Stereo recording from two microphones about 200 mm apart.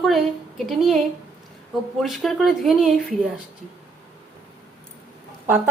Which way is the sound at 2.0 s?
Centre (ahead or behind).